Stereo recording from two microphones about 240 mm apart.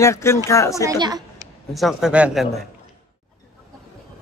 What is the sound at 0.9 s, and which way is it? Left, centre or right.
Speech, centre.